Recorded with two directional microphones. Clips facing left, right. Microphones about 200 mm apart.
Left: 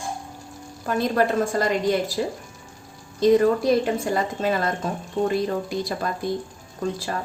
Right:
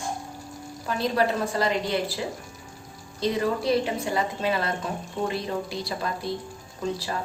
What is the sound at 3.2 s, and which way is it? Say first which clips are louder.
Speech: left 8 dB; 50° left (ahead or behind).